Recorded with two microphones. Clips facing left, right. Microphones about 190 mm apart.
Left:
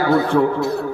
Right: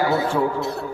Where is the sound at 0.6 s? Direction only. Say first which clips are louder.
Left 5 dB; centre (ahead or behind).